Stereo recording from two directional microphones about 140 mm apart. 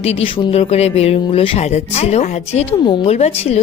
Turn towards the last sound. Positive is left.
turn(degrees=50)  # may be behind; listen again after turning